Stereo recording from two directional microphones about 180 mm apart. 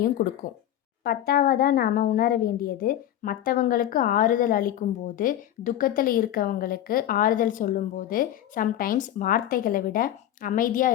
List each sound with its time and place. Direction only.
0.2 s speech: 50° left (ahead or behind)